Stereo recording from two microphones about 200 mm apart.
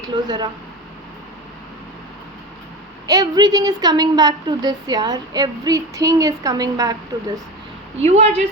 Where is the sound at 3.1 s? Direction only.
20° right (ahead or behind).